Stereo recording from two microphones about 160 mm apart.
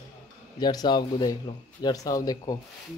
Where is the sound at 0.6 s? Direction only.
25° left (ahead or behind).